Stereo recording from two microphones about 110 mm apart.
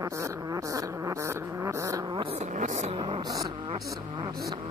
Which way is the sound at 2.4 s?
90° right.